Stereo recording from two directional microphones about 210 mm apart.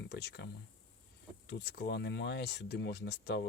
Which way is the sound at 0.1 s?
50° left (ahead or behind).